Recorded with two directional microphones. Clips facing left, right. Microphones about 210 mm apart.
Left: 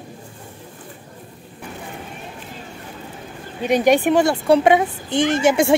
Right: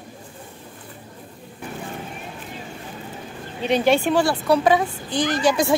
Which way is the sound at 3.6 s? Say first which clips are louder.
Left 3 dB; 10° left (ahead or behind).